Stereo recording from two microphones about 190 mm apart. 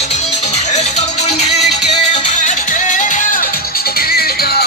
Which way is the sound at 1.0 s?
35° left (ahead or behind).